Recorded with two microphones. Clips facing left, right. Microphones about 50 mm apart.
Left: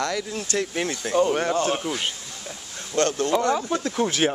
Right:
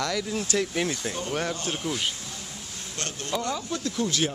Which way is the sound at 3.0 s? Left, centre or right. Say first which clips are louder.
Left 10 dB; left.